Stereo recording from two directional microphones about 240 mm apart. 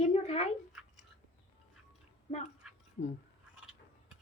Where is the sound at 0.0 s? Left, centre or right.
Left.